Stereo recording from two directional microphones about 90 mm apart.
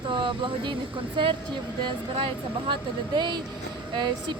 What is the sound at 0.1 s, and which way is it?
Speech, 65° right (ahead or behind).